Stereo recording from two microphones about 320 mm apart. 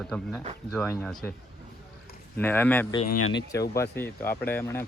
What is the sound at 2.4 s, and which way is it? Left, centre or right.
Speech, centre.